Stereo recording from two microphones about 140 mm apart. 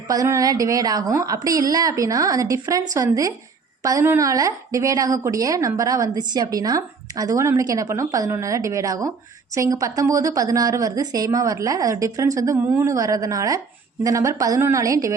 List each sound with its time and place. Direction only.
0.1 s a woman's voice: 25° right (ahead or behind)